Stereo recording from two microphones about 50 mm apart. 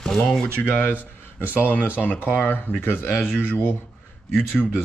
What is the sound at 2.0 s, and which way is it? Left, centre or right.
Speech, left.